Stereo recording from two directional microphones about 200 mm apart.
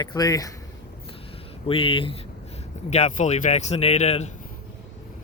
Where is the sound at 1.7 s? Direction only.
25° left (ahead or behind).